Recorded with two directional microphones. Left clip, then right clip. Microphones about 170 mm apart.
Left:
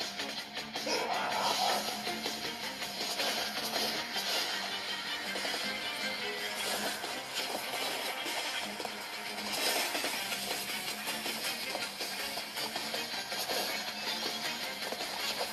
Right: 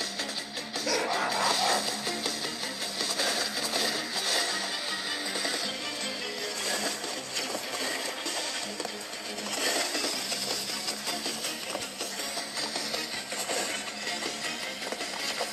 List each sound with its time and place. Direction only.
1.4 s music: 25° right (ahead or behind)